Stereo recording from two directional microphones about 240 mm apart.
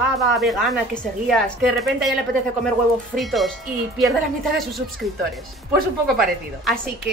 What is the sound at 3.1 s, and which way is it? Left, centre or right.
A woman's voice, centre.